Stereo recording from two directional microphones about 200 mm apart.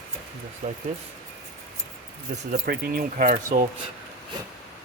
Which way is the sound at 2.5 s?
50° right (ahead or behind).